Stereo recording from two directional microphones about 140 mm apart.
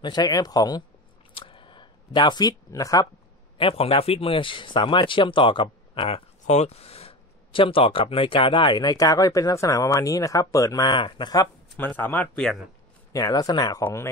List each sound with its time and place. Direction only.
0.0 s speech: 30° left (ahead or behind)
1.3 s a sound: 40° left (ahead or behind)
3.5 s speech: 45° left (ahead or behind)
11.7 s speech: 10° left (ahead or behind)
13.1 s speech: 25° left (ahead or behind)